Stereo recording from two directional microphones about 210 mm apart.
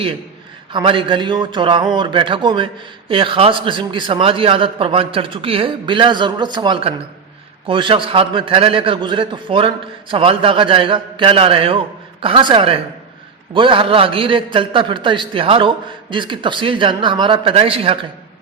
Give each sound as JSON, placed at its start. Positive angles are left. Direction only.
{"t": 0.7, "sound": "a man's voice", "side_deg": -25}